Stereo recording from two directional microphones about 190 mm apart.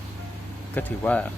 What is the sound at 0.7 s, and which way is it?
Speech, 10° left (ahead or behind).